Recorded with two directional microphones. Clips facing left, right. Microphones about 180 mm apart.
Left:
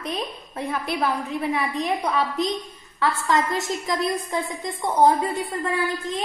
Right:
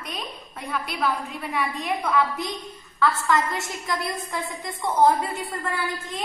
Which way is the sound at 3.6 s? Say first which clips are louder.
Left 5 dB; 20° left (ahead or behind).